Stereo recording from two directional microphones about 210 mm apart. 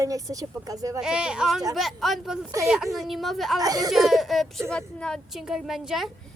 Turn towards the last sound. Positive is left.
turn(degrees=0)  # may be behind; listen again after turning